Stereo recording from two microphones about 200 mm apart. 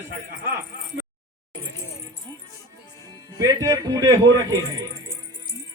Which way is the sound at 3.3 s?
15° right (ahead or behind).